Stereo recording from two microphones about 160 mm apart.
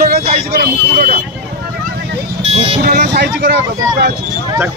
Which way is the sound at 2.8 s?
75° right (ahead or behind).